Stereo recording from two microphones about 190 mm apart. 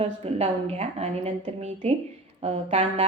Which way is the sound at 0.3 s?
35° right (ahead or behind).